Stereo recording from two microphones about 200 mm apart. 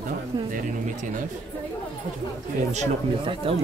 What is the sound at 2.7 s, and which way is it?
Speech, 30° right (ahead or behind).